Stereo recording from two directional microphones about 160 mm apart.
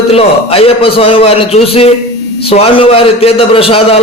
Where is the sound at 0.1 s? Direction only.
35° left (ahead or behind).